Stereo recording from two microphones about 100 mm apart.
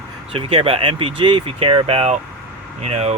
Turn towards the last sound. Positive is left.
turn(degrees=-90)